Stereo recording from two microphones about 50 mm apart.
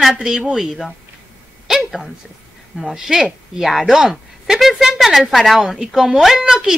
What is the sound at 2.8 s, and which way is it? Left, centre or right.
A woman's voice, centre.